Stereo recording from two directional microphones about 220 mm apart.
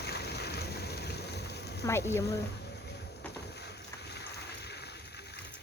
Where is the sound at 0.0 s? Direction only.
50° left (ahead or behind).